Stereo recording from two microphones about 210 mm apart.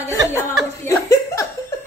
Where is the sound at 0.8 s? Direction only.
15° left (ahead or behind).